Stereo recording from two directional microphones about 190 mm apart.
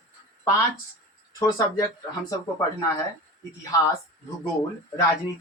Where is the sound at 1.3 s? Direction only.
20° left (ahead or behind).